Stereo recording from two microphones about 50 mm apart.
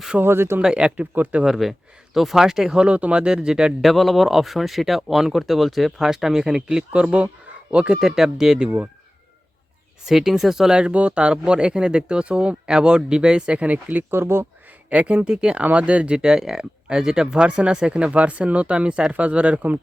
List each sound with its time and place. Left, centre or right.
0.2 s speech: right
0.6 s speech: centre
1.1 s speech: right
1.5 s speech: centre
2.8 s speech: right
3.8 s speech: centre; by 7.9 s right
8.0 s speech: centre
10.1 s speech: centre; by 14.0 s right
14.1 s speech: right
14.8 s speech: right
15.6 s speech: right